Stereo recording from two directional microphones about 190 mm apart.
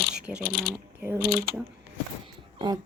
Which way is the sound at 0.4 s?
50° left (ahead or behind).